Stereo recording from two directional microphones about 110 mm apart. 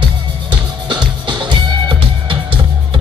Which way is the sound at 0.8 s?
45° right (ahead or behind).